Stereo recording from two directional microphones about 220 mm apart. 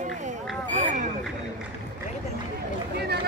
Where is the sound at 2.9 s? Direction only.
45° right (ahead or behind).